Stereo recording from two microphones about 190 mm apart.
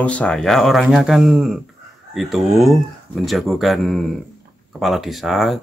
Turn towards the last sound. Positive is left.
turn(degrees=0)  # may be behind; listen again after turning